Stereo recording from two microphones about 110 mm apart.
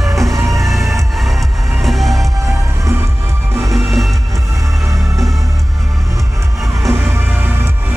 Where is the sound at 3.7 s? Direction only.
Centre (ahead or behind).